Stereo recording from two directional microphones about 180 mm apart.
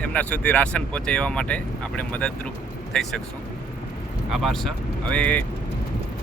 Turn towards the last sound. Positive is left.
turn(degrees=5)  # may be behind; listen again after turning